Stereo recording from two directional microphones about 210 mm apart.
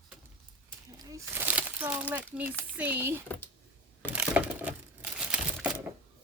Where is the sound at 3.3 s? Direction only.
10° left (ahead or behind).